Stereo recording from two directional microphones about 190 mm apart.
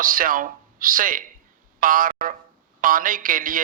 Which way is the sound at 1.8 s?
45° right (ahead or behind).